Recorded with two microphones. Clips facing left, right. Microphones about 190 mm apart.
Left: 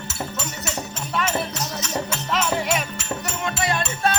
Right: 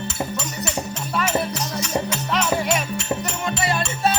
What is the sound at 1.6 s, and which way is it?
Music, 10° right (ahead or behind).